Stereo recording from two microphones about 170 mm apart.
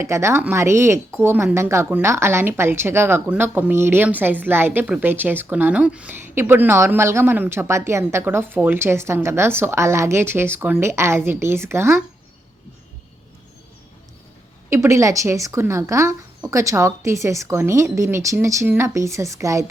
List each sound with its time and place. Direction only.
0.0 s a woman's voice: 15° right (ahead or behind)
14.7 s a woman's voice: 15° right (ahead or behind)